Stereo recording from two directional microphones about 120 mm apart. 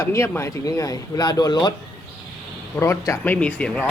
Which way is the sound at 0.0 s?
25° left (ahead or behind).